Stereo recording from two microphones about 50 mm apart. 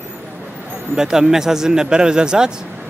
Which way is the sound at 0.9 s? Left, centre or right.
Centre.